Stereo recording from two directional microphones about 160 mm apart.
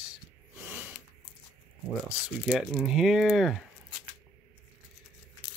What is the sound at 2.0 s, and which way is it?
Speech, 10° right (ahead or behind).